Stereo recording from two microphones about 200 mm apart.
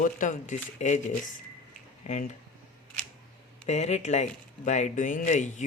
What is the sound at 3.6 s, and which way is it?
Speech, 35° left (ahead or behind).